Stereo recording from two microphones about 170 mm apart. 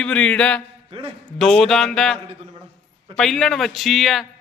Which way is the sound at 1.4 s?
Centre (ahead or behind).